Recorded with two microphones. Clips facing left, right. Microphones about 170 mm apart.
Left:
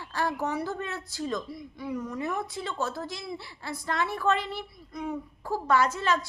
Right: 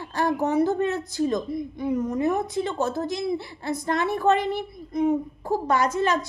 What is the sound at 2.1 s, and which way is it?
Speech, 40° right (ahead or behind).